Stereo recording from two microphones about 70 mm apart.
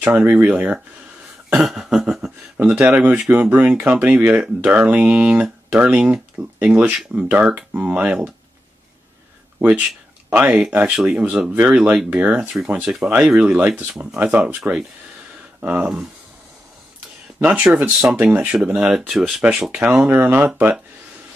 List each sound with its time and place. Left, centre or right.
0.0 s speech: right
1.5 s a sound: centre
2.5 s speech: right
9.6 s speech: right
15.6 s speech: right
17.7 s speech: right
18.9 s a sound: centre
19.4 s speech: centre